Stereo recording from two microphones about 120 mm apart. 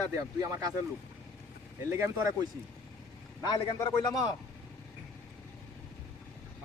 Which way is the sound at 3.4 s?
35° left (ahead or behind).